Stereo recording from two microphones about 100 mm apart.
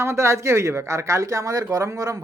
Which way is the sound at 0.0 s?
25° right (ahead or behind).